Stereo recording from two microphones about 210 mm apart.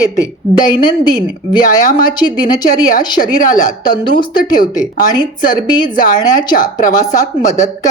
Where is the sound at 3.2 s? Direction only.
40° left (ahead or behind).